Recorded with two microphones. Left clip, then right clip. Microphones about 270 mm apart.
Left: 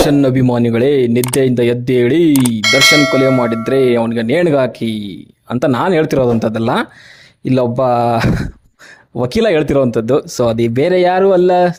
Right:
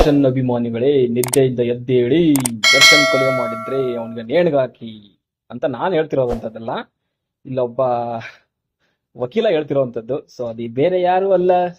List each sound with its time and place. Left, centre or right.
0.1 s speech: left
2.3 s clang: centre
3.7 s speech: left
9.2 s speech: left